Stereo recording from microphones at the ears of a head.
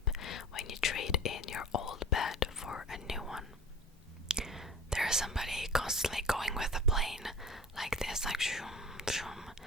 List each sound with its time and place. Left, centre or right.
0.0 s whispering: left
4.3 s whispering: centre